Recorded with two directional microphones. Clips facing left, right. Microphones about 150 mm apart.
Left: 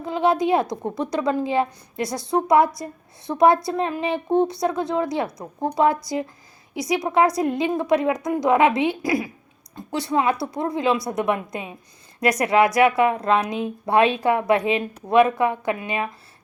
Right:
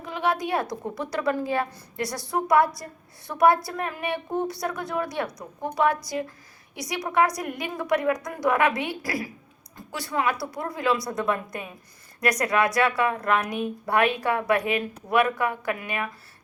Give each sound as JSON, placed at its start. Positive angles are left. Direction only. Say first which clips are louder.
{"t": 0.0, "sound": "a woman's voice", "louder": "left 6 dB", "side_deg": 25}